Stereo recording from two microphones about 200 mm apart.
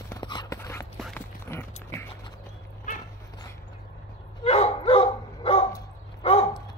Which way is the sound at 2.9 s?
40° left (ahead or behind).